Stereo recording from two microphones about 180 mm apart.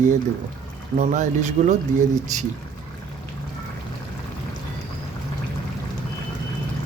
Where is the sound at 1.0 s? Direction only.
45° right (ahead or behind).